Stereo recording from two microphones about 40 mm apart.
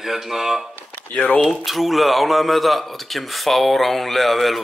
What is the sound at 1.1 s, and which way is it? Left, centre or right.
Speech, left.